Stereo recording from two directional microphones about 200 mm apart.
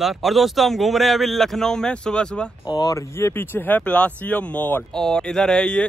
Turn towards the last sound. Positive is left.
turn(degrees=5)  # may be behind; listen again after turning